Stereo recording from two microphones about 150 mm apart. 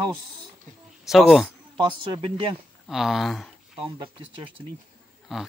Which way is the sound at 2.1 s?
35° right (ahead or behind).